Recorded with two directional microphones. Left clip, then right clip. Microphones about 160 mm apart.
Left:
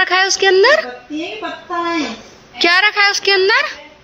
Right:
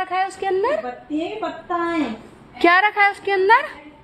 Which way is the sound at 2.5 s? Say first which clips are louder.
Left 3 dB; 20° right (ahead or behind).